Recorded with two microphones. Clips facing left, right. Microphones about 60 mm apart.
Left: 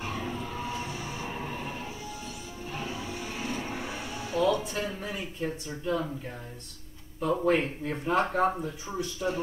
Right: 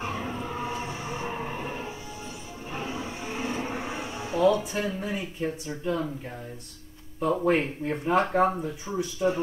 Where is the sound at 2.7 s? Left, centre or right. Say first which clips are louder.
Right 3 dB; right.